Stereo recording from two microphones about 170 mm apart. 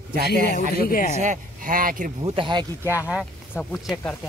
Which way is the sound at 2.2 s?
30° right (ahead or behind).